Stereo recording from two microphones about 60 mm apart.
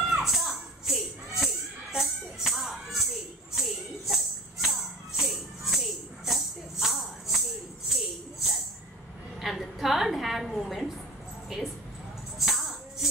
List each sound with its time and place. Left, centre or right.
0.2 s music: centre
7.9 s tambourine: centre
9.4 s a sound: centre
12.4 s music: centre